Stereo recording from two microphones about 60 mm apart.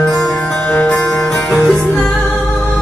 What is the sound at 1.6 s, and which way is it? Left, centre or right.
Music, centre.